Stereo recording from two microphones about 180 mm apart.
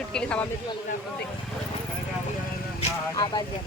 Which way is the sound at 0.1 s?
5° left (ahead or behind).